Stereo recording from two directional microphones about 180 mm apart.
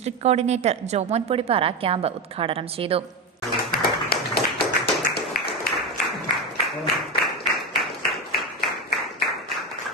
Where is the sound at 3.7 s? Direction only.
55° left (ahead or behind).